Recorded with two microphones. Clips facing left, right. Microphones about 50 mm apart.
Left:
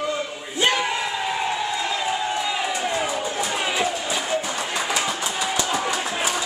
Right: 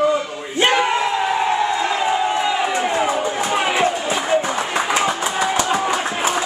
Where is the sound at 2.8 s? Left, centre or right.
Right.